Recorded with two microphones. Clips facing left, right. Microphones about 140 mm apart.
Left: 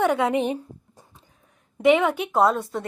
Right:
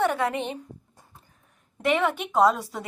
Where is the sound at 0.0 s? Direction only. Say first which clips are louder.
Left 3 dB; 15° left (ahead or behind).